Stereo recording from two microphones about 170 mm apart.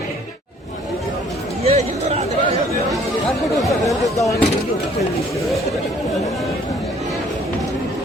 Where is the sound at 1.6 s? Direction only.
40° right (ahead or behind).